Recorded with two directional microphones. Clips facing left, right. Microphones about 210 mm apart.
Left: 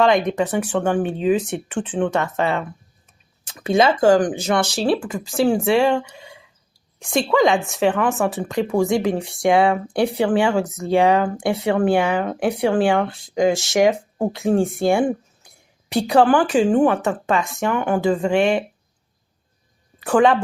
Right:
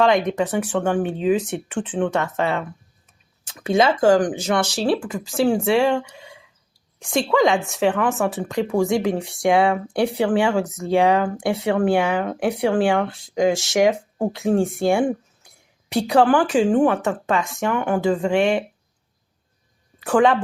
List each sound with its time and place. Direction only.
0.0 s speech: 30° left (ahead or behind)
15.4 s a sound: 35° left (ahead or behind)
15.9 s speech: 35° left (ahead or behind)
20.0 s a woman's voice: 30° left (ahead or behind)